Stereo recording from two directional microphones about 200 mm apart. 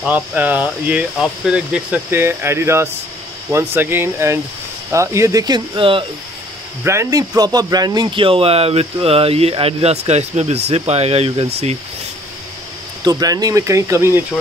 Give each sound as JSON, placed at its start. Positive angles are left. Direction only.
{"t": 0.0, "sound": "speech", "side_deg": -10}
{"t": 6.8, "sound": "speech", "side_deg": -15}
{"t": 13.0, "sound": "speech", "side_deg": -20}